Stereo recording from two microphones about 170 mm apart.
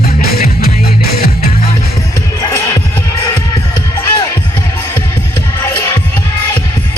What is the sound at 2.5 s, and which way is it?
Music, 15° left (ahead or behind).